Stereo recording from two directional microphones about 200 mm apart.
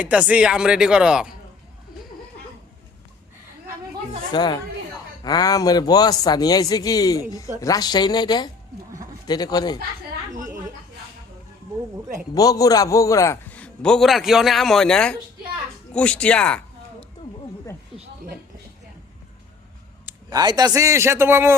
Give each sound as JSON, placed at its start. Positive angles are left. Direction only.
{"t": 0.0, "sound": "a man's voice", "side_deg": -5}
{"t": 4.3, "sound": "a man's voice", "side_deg": 20}
{"t": 12.3, "sound": "a man's voice", "side_deg": 20}
{"t": 17.9, "sound": "a sound", "side_deg": 25}
{"t": 20.1, "sound": "a man's voice", "side_deg": -20}